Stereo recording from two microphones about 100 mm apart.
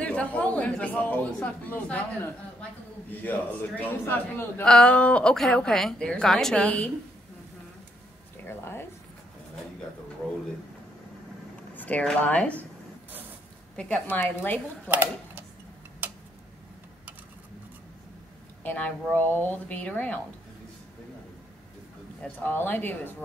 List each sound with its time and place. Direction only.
0.0 s a man's voice: 15° left (ahead or behind)
4.6 s a man's voice: 10° left (ahead or behind)
8.5 s a man's voice: 25° left (ahead or behind)
11.7 s a sound: 15° left (ahead or behind)
12.0 s a man's voice: 10° left (ahead or behind)
13.7 s a man's voice: 10° left (ahead or behind)
14.9 s speech: 20° right (ahead or behind)
18.6 s a woman's voice: 15° left (ahead or behind)
22.2 s a man's voice: 20° left (ahead or behind)